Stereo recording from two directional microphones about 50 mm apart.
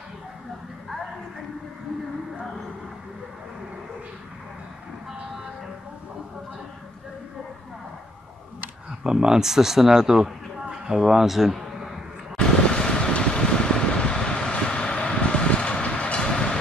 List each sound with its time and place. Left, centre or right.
9.0 s a man's voice: centre
12.4 s vehicle: centre